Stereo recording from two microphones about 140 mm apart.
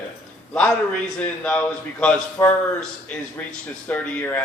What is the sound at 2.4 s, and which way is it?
Speech, 20° left (ahead or behind).